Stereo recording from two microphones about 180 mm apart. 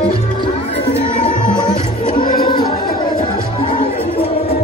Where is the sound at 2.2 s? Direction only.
55° left (ahead or behind).